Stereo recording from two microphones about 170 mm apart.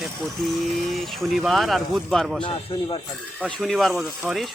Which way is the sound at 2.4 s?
30° left (ahead or behind).